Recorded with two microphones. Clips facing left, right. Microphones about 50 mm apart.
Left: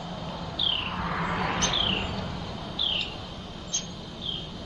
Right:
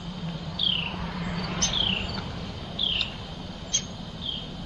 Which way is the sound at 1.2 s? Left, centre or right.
Left.